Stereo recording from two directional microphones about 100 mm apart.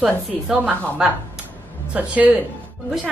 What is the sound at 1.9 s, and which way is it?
Speech, 15° right (ahead or behind).